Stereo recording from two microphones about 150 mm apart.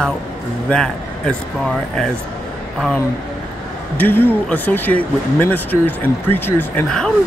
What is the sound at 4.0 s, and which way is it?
Speech, 15° left (ahead or behind).